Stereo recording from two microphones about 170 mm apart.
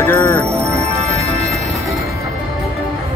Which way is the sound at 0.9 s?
40° right (ahead or behind).